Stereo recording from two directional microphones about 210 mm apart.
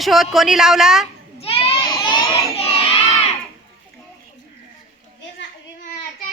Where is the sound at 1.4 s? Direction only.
25° left (ahead or behind).